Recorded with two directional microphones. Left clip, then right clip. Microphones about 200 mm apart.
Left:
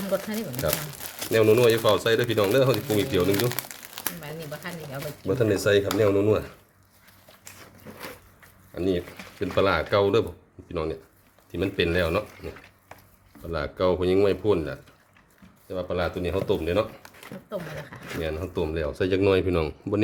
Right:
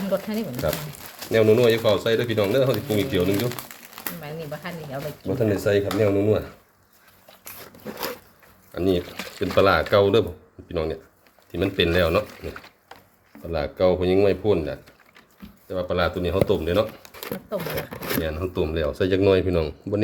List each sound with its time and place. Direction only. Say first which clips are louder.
0.1 s speech: right 2 dB; centre (ahead or behind); by 4.1 s 30° left (ahead or behind)
4.2 s speech: right 3 dB; 5° right (ahead or behind)
5.2 s speech: even; 20° left (ahead or behind)
8.7 s speech: right 4 dB; 10° right (ahead or behind)
13.5 s speech: right 4 dB; 5° left (ahead or behind)
18.2 s speech: right 1 dB; centre (ahead or behind)